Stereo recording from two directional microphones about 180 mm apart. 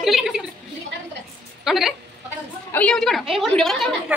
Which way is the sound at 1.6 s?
Centre (ahead or behind).